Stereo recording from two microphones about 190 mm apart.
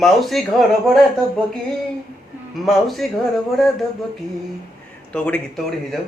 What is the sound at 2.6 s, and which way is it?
Speech, centre (ahead or behind).